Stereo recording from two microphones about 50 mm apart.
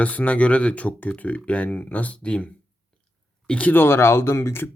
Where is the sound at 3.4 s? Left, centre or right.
Left.